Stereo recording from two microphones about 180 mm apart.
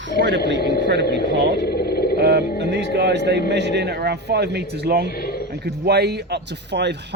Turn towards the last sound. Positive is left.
turn(degrees=-70)  # may be behind; listen again after turning